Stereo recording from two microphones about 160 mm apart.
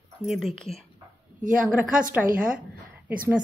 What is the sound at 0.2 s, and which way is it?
Speech, centre (ahead or behind).